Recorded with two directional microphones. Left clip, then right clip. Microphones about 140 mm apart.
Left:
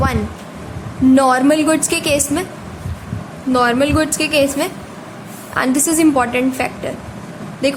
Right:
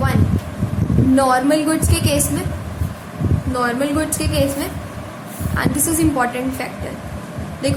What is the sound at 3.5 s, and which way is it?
A woman's voice, 60° left (ahead or behind).